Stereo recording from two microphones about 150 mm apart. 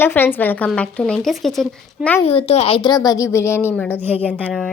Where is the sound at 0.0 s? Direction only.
15° left (ahead or behind).